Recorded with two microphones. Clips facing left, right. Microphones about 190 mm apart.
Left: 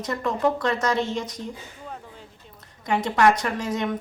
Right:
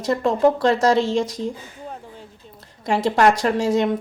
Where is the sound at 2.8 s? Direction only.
30° right (ahead or behind).